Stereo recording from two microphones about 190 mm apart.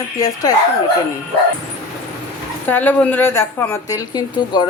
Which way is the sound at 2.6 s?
10° left (ahead or behind).